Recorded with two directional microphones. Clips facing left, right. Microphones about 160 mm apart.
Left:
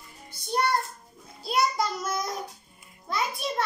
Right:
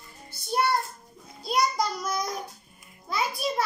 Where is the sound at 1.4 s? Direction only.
Centre (ahead or behind).